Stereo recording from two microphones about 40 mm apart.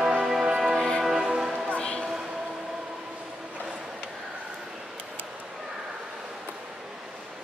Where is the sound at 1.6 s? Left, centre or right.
Left.